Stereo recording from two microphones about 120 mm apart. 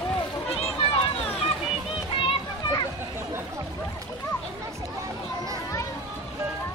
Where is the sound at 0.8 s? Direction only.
50° left (ahead or behind).